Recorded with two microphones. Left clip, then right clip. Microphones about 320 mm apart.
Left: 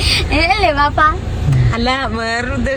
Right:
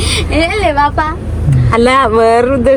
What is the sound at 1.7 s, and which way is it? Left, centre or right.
Speech, centre.